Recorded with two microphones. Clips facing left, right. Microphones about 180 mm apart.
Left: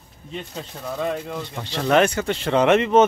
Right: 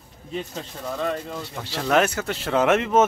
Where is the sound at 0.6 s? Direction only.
5° left (ahead or behind).